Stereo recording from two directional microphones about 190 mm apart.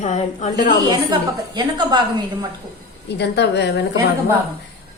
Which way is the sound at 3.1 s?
60° left (ahead or behind).